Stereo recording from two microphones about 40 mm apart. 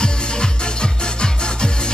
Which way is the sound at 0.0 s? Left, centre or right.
Left.